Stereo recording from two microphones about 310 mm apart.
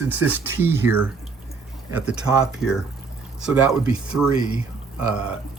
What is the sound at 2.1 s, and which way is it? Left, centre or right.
Speech, centre.